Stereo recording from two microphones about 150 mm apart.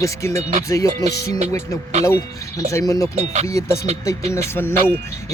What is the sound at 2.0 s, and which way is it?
Speech, 20° left (ahead or behind).